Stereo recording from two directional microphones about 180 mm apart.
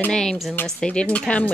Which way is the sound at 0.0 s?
5° left (ahead or behind).